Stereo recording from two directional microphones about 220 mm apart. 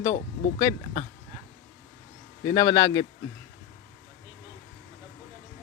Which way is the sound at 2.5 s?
15° left (ahead or behind).